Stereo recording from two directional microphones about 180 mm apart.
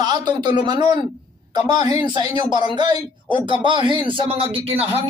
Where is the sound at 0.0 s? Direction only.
25° right (ahead or behind).